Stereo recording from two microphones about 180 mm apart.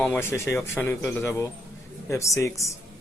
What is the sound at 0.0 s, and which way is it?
Speech, 10° left (ahead or behind).